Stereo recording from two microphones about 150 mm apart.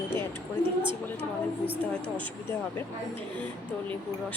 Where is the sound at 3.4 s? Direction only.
10° left (ahead or behind).